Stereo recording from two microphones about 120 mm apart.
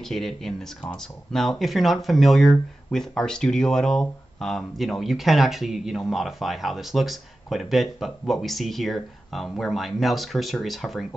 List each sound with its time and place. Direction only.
0.0 s speech: 5° left (ahead or behind)